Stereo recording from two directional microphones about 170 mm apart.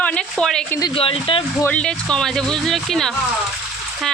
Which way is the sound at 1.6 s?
5° left (ahead or behind).